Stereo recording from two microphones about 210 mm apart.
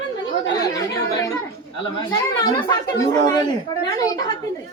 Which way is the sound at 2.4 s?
20° left (ahead or behind).